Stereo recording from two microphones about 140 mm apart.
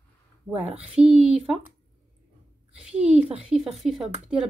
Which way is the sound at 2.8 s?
5° right (ahead or behind).